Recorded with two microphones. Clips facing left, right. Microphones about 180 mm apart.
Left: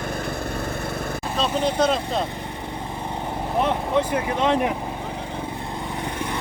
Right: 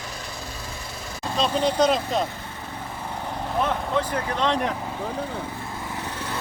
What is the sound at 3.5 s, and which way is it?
Vehicle, 20° left (ahead or behind).